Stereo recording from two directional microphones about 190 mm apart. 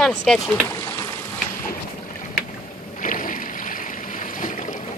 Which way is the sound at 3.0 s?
45° left (ahead or behind).